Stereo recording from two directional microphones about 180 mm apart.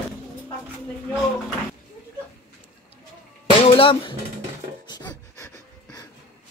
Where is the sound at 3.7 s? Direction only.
30° left (ahead or behind).